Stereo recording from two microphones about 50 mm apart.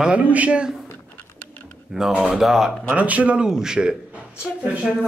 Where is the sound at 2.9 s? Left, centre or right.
Right.